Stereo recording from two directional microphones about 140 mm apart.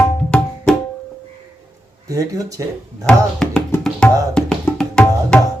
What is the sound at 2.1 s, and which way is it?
Speech, 25° right (ahead or behind).